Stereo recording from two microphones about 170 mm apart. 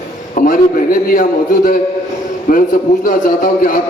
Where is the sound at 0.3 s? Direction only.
55° left (ahead or behind).